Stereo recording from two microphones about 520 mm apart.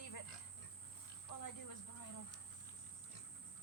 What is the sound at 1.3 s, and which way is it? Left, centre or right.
Cricket, left.